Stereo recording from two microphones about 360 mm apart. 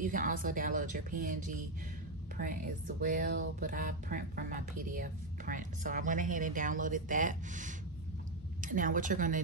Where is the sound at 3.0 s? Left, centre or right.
Right.